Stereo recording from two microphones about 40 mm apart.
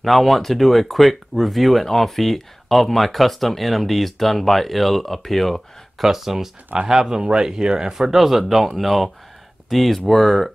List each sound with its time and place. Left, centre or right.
0.0 s speech: centre
6.0 s speech: centre